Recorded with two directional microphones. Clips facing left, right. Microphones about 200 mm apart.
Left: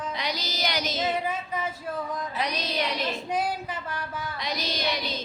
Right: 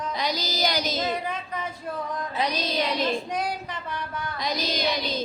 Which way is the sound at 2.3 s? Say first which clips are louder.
Right 5 dB; 30° right (ahead or behind).